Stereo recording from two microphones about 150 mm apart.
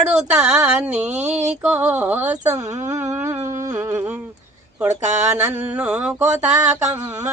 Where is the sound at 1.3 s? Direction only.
50° right (ahead or behind).